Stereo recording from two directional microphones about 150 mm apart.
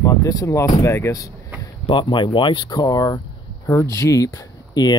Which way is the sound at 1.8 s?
35° left (ahead or behind).